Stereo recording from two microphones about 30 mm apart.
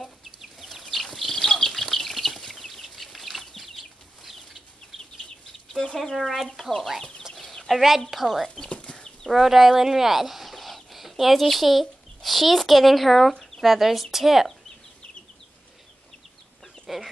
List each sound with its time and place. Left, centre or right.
0.0 s chicken: centre
1.0 s a sound: centre
1.7 s chicken: centre
4.9 s chicken: centre
5.7 s a sound: centre
6.1 s speech: centre
7.6 s speech: centre
8.7 s chicken: left
9.3 s speech: centre
16.8 s chicken: centre